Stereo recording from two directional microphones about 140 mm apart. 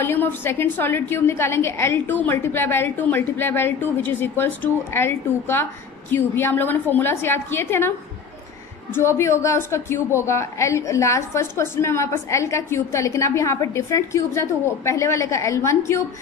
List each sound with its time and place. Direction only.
0.0 s a woman's voice: 15° left (ahead or behind)
8.9 s a woman's voice: 20° left (ahead or behind)